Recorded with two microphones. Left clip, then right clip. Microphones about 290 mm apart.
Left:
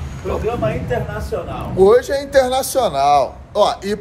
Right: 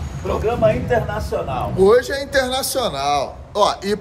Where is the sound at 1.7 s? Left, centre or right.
Centre.